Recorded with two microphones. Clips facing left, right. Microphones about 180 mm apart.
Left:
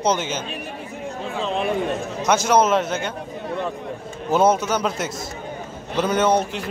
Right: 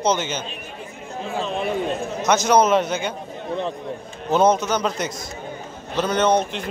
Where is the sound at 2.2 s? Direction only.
10° left (ahead or behind).